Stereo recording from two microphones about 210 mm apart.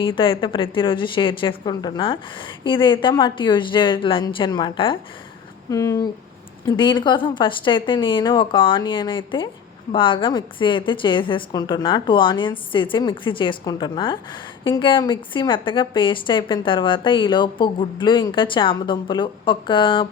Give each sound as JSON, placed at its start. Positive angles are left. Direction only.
{"t": 0.0, "sound": "a woman's voice", "side_deg": 25}